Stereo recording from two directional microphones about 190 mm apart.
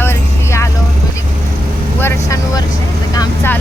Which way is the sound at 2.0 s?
15° left (ahead or behind).